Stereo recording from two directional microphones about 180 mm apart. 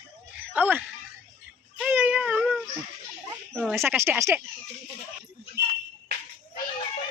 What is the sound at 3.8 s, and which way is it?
Speech, 10° right (ahead or behind).